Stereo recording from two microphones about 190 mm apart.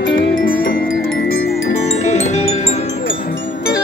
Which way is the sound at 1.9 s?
35° left (ahead or behind).